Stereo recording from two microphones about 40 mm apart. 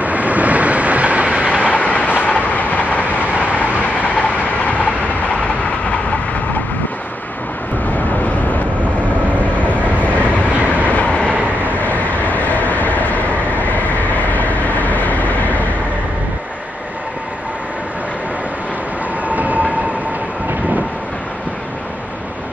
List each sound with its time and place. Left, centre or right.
0.0 s train: right
1.6 s train: left
8.2 s vehicle: left
9.6 s train: left
11.6 s vehicle: left
19.2 s train: right